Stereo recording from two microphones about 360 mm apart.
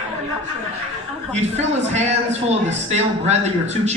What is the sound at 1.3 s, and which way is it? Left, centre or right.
A man's voice, centre.